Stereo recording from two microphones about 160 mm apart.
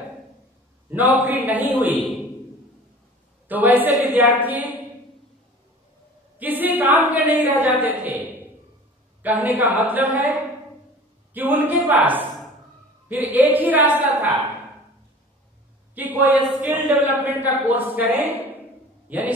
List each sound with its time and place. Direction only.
0.8 s a woman's voice: 10° right (ahead or behind)
3.4 s a man's voice: 10° right (ahead or behind)
6.3 s a woman's voice: 10° right (ahead or behind)
7.8 s a sound: 10° right (ahead or behind)
9.2 s a woman's voice: 10° right (ahead or behind)
10.1 s a woman's voice: 20° left (ahead or behind)
11.3 s a woman's voice: 10° right (ahead or behind)
15.9 s a woman's voice: 10° right (ahead or behind)